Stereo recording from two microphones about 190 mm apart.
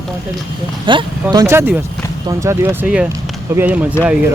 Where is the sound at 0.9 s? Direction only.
25° right (ahead or behind); by 3.9 s 10° right (ahead or behind).